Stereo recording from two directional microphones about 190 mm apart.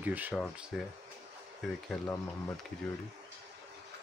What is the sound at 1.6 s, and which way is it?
Speech, centre (ahead or behind).